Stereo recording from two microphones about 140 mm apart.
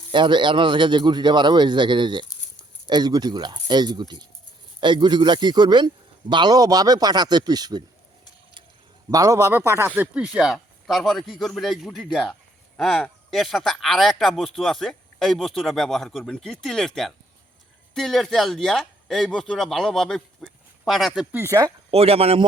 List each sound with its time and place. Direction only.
0.1 s speech: 35° right (ahead or behind)
9.0 s speech: 25° right (ahead or behind); by 21.1 s centre (ahead or behind)
21.3 s speech: 20° right (ahead or behind)
21.8 s speech: 45° right (ahead or behind)